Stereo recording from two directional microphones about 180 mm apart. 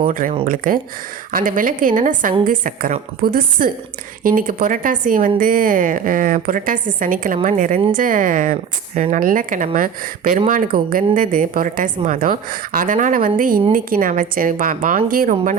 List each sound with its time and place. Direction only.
0.0 s speech: 50° right (ahead or behind)